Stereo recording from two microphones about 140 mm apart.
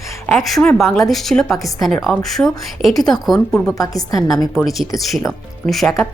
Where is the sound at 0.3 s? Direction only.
Centre (ahead or behind).